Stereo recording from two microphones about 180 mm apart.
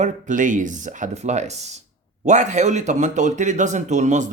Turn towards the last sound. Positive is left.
turn(degrees=-40)  # may be behind; listen again after turning